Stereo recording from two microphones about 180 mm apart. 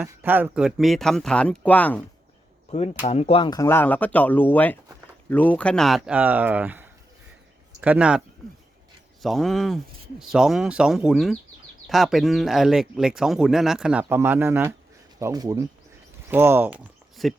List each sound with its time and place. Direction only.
0.0 s speech: 10° right (ahead or behind); by 2.0 s 10° left (ahead or behind)
2.6 s speech: 35° left (ahead or behind); by 8.2 s 5° right (ahead or behind)
9.2 s speech: centre (ahead or behind)